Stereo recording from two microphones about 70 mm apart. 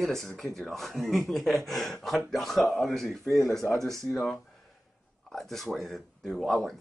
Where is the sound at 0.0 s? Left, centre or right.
Centre.